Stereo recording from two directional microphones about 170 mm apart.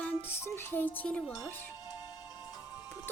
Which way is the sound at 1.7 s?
25° left (ahead or behind).